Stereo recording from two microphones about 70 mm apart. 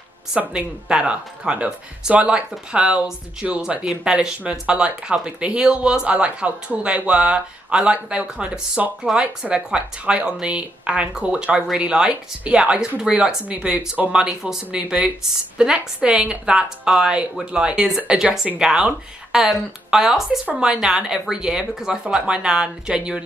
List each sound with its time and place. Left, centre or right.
0.5 s a woman's voice: centre